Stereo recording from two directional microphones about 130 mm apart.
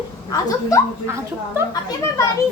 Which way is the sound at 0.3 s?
25° left (ahead or behind).